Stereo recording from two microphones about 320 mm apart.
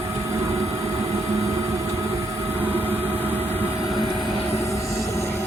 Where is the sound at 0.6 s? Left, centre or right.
Centre.